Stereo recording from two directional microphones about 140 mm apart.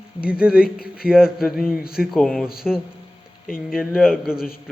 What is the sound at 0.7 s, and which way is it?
Speech, 90° left.